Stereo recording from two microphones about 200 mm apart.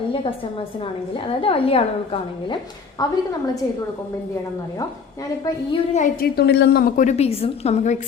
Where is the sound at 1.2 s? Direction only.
25° left (ahead or behind).